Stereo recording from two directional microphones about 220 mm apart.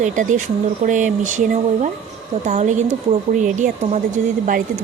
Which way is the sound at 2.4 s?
30° right (ahead or behind).